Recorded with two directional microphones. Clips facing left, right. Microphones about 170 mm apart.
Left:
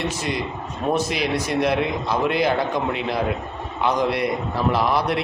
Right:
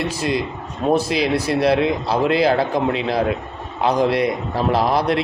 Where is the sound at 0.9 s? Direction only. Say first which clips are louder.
Right 4 dB; 35° right (ahead or behind).